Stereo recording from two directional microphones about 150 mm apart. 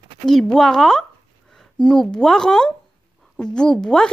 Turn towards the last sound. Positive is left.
turn(degrees=5)  # may be behind; listen again after turning